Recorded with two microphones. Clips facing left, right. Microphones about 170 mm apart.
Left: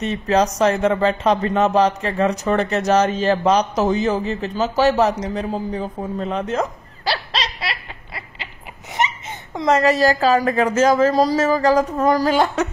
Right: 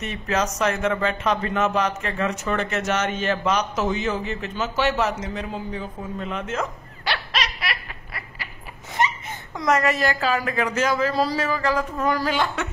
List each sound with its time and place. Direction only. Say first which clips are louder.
0.0 s speech: left 7 dB; 35° left (ahead or behind)